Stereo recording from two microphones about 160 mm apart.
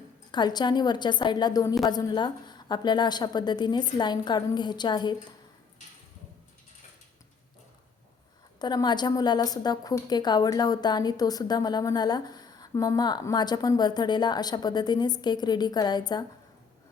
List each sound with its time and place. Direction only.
0.3 s a woman's voice: 25° left (ahead or behind)
8.5 s a woman's voice: 25° left (ahead or behind)